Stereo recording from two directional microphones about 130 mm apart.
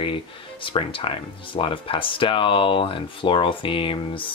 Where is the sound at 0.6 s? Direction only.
40° left (ahead or behind).